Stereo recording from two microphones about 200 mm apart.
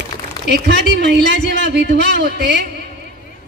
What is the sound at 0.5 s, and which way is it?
A man's voice, 55° right (ahead or behind).